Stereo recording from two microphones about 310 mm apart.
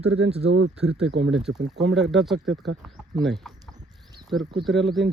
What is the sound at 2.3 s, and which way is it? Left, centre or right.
Speech, right.